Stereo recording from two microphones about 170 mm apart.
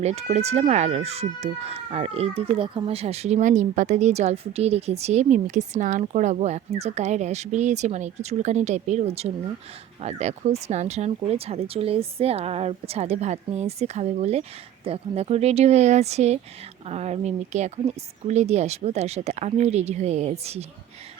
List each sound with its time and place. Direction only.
0.0 s speech: 40° right (ahead or behind)